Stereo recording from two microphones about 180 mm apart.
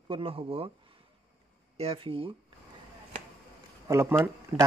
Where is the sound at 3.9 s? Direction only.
15° right (ahead or behind).